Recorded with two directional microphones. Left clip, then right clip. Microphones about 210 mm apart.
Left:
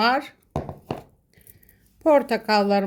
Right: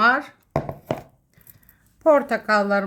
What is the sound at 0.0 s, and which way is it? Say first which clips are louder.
Speech: right 3 dB; 35° left (ahead or behind).